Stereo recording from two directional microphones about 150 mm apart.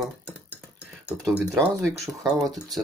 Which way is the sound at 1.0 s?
10° right (ahead or behind).